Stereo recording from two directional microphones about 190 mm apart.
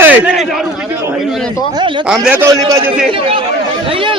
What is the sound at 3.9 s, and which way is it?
Speech, 30° right (ahead or behind).